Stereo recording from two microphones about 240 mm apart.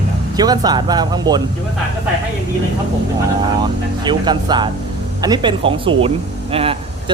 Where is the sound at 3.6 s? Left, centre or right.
Centre.